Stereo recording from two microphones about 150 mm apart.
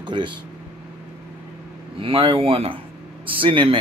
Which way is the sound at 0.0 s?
30° right (ahead or behind).